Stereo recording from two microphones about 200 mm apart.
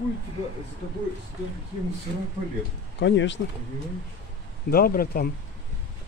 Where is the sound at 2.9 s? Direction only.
60° left (ahead or behind).